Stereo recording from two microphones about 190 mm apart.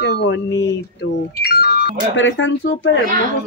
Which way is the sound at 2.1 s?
75° left (ahead or behind).